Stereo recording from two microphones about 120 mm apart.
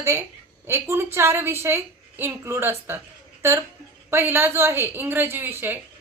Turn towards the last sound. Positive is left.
turn(degrees=-20)  # may be behind; listen again after turning